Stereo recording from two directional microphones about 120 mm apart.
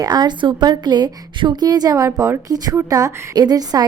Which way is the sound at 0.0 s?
35° right (ahead or behind).